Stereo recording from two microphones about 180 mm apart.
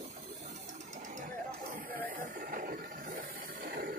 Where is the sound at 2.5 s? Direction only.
50° right (ahead or behind).